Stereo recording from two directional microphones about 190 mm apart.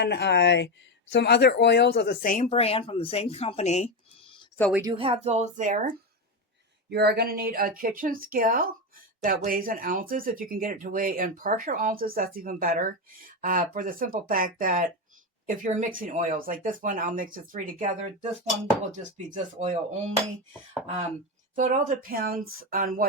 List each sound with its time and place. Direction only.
0.0 s speech: 65° left (ahead or behind); by 3.8 s 35° left (ahead or behind)
4.7 s speech: 20° right (ahead or behind)
4.9 s speech: 30° right (ahead or behind)
6.9 s speech: 60° right (ahead or behind); by 19.7 s 40° right (ahead or behind)
21.5 s speech: 40° right (ahead or behind)